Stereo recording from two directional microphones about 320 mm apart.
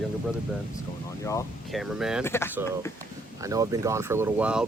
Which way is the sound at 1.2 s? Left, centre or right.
Centre.